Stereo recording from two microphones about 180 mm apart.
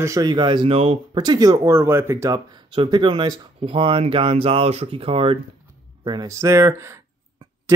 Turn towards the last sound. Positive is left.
turn(degrees=-15)  # may be behind; listen again after turning